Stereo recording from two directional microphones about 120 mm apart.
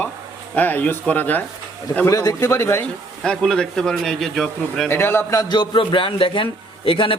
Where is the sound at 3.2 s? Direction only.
5° left (ahead or behind).